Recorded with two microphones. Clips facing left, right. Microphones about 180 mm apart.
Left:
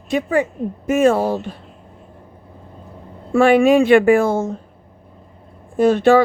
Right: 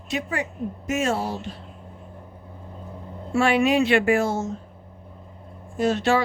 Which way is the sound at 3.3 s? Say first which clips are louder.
Left 8 dB; 50° left (ahead or behind).